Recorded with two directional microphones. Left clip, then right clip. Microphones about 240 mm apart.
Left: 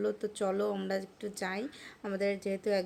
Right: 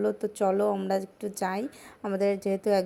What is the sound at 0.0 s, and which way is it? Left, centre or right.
A woman's voice, centre.